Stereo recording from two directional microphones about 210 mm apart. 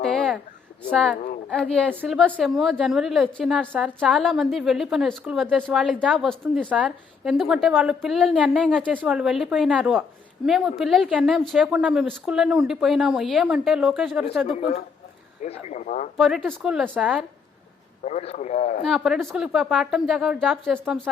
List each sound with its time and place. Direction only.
0.0 s a sound: centre (ahead or behind)
0.9 s speech: centre (ahead or behind)
14.4 s speech: 30° left (ahead or behind)
16.1 s speech: centre (ahead or behind)
18.0 s speech: 30° left (ahead or behind)
18.9 s speech: centre (ahead or behind)